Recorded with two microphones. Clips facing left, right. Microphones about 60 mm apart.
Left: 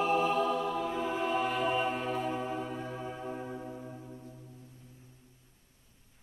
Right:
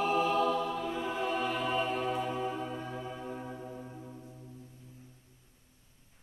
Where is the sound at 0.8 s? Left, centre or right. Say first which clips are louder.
Left 1 dB; centre.